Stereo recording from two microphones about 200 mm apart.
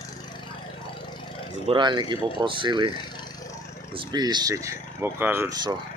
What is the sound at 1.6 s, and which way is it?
Speech, 25° right (ahead or behind).